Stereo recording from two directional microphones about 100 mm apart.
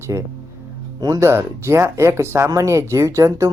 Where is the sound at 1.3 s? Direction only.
25° right (ahead or behind).